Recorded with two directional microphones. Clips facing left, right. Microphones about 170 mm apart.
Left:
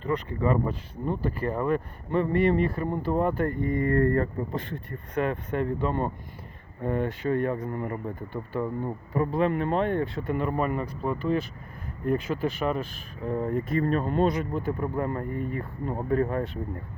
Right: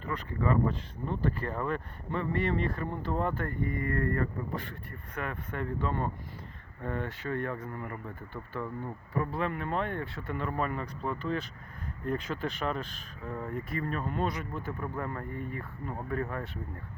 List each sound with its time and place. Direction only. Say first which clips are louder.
0.1 s speech: left 5 dB; 15° left (ahead or behind)
8.0 s speech: left 8 dB; 15° left (ahead or behind)
13.2 s speech: left 9 dB; 20° left (ahead or behind)